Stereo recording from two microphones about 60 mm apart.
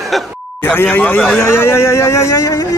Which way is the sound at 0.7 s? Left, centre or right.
Left.